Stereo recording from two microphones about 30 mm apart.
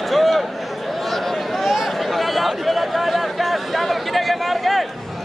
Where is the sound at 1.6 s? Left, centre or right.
Centre.